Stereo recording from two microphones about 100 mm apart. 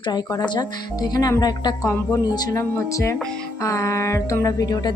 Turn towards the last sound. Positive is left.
turn(degrees=40)  # may be behind; listen again after turning